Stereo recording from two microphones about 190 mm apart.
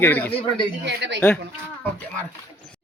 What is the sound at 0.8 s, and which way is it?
Speech, 65° right (ahead or behind).